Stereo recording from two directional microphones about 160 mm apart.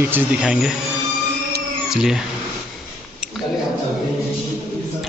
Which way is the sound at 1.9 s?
5° right (ahead or behind).